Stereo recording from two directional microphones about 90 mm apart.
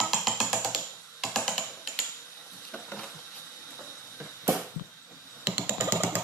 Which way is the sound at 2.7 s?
10° left (ahead or behind).